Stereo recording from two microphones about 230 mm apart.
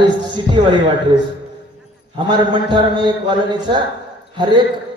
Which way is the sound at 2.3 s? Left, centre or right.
Centre.